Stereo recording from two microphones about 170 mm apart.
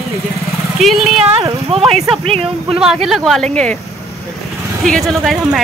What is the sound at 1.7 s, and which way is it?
Speech, 35° right (ahead or behind).